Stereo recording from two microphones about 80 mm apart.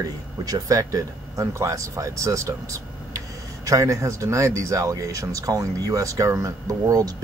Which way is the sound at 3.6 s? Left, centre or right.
Right.